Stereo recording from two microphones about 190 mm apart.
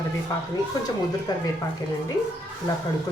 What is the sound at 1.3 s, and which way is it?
Speech, 20° left (ahead or behind).